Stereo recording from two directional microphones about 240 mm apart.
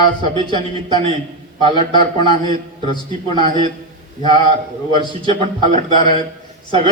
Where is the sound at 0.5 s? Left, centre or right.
Centre.